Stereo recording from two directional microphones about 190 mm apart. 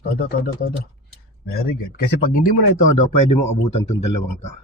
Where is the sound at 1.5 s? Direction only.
55° left (ahead or behind).